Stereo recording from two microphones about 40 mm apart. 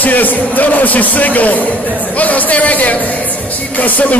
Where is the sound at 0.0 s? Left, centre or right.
Left.